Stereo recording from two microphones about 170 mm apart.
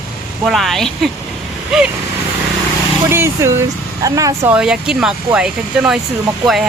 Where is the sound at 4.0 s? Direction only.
20° right (ahead or behind).